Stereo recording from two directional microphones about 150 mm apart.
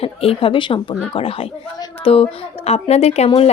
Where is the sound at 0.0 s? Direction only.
40° left (ahead or behind).